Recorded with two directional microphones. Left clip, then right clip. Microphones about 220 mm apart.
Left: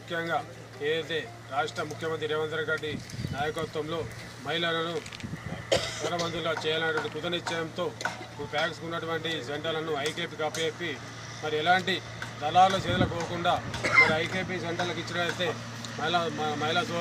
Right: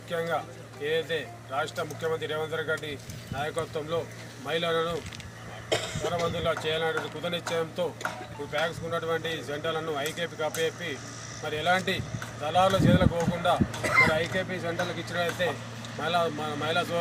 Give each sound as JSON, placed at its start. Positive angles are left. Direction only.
{"t": 0.1, "sound": "speech", "side_deg": -5}
{"t": 5.6, "sound": "speech", "side_deg": 25}
{"t": 6.3, "sound": "speech", "side_deg": -5}